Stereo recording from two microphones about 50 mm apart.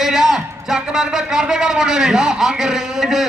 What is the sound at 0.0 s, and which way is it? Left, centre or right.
A man's voice, centre.